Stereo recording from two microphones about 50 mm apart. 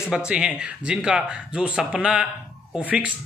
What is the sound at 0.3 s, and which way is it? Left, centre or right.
Speech, right.